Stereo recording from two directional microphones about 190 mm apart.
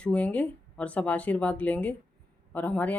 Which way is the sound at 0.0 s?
5° left (ahead or behind).